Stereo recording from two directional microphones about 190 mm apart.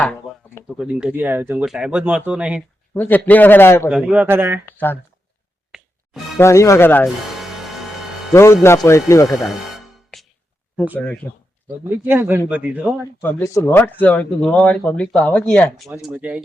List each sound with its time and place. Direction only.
0.0 s speech: 5° left (ahead or behind)
2.9 s speech: 10° left (ahead or behind)
3.8 s speech: 5° right (ahead or behind)
4.6 s speech: 10° left (ahead or behind)
6.4 s speech: 15° left (ahead or behind)
7.3 s music: centre (ahead or behind)
8.3 s a man's voice: 15° left (ahead or behind)
9.4 s music: centre (ahead or behind)
10.8 s speech: 10° right (ahead or behind)
11.0 s speech: 10° left (ahead or behind)
12.0 s speech: 10° right (ahead or behind)
13.2 s speech: 15° left (ahead or behind); by 16.4 s 5° right (ahead or behind)